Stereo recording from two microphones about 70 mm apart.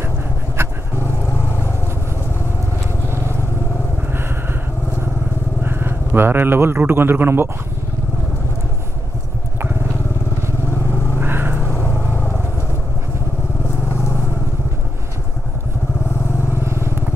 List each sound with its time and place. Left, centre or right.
1.0 s vehicle: left
5.6 s speech: right
11.1 s vehicle: right
11.6 s vehicle: left
16.6 s vehicle: right